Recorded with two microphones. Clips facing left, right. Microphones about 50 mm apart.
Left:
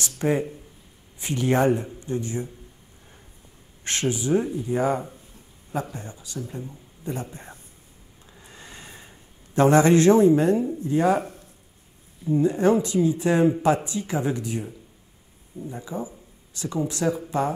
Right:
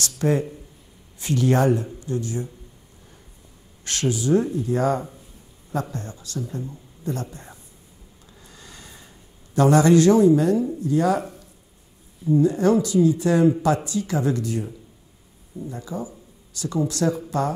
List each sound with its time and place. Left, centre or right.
0.0 s a man's voice: centre
3.8 s speech: left
8.4 s a sound: left
10.8 s speech: left
12.3 s speech: left